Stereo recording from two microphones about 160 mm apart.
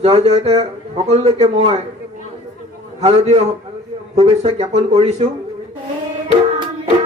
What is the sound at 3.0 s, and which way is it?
Speech, 45° right (ahead or behind).